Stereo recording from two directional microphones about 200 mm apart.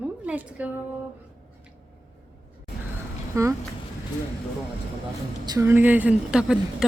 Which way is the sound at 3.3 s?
15° right (ahead or behind).